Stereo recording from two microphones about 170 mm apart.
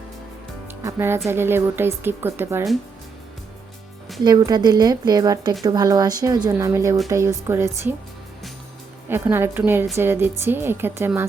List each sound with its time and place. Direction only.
0.7 s speech: 15° right (ahead or behind)
4.2 s speech: 25° right (ahead or behind)
9.0 s speech: 15° right (ahead or behind)